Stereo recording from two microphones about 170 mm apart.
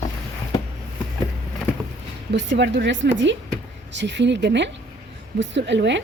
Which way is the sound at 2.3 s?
90° right.